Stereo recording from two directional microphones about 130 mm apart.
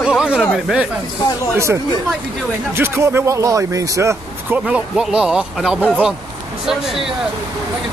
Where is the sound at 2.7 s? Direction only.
20° right (ahead or behind).